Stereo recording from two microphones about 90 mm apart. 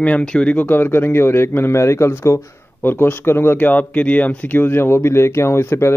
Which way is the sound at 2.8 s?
25° left (ahead or behind).